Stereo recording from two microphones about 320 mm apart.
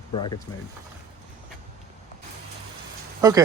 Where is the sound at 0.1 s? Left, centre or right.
Centre.